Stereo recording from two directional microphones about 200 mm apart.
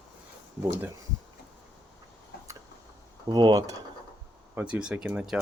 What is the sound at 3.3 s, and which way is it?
Mechanisms, 20° right (ahead or behind).